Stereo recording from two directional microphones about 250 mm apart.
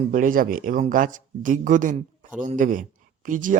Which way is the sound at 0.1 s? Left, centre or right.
Right.